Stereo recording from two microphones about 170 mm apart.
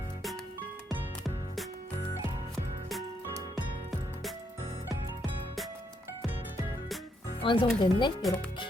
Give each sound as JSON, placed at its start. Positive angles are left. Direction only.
{"t": 7.4, "sound": "speech", "side_deg": 30}
{"t": 8.2, "sound": "speech", "side_deg": 0}